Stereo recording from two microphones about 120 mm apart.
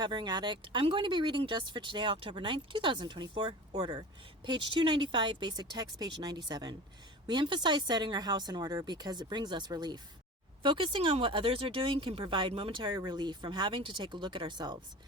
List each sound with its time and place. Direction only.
0.0 s speech: 40° right (ahead or behind)